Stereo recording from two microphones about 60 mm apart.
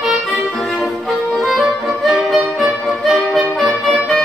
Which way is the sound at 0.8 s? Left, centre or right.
Centre.